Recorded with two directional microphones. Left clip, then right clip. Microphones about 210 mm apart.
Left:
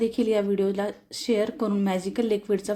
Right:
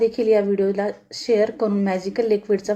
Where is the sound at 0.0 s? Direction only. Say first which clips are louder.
Right 6 dB; 50° left (ahead or behind).